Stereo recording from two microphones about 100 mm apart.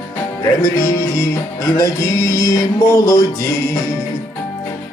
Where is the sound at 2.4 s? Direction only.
30° left (ahead or behind).